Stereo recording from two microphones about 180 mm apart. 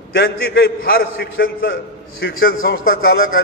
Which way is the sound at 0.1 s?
60° left (ahead or behind).